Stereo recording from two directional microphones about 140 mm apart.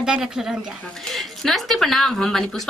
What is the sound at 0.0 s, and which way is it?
A woman's voice, 5° right (ahead or behind).